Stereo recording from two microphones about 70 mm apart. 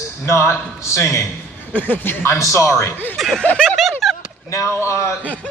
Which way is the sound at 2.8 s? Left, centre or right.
Left.